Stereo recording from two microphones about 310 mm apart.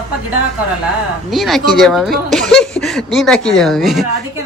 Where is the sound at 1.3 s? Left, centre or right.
Centre.